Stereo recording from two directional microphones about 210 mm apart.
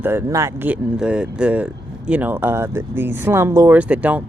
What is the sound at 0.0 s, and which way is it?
Speech, 10° right (ahead or behind).